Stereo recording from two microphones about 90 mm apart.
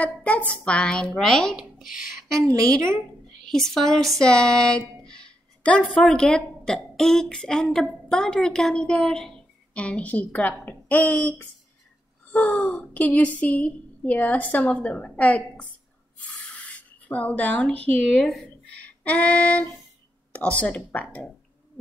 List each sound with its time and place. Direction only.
0.0 s a woman's voice: 15° left (ahead or behind)
2.3 s a woman's voice: 35° right (ahead or behind)
3.4 s a woman's voice: 5° left (ahead or behind)
19.0 s a woman's voice: 15° left (ahead or behind)